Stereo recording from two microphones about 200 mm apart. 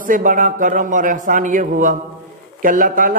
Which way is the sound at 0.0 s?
40° right (ahead or behind).